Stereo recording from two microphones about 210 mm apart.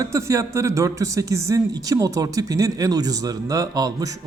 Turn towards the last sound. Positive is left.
turn(degrees=-15)  # may be behind; listen again after turning